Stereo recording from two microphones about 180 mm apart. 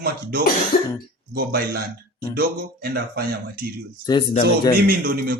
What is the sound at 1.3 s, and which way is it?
Speech, 55° right (ahead or behind).